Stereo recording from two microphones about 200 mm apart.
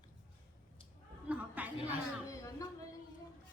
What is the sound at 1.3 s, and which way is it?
Chatter, 10° right (ahead or behind).